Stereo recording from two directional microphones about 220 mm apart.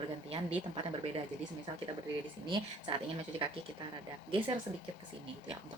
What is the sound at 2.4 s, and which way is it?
Speech, 20° right (ahead or behind).